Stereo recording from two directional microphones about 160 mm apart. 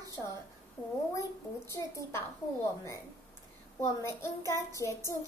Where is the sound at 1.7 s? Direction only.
20° left (ahead or behind).